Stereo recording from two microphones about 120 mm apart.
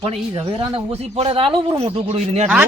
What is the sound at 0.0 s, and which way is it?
Speech, 55° right (ahead or behind).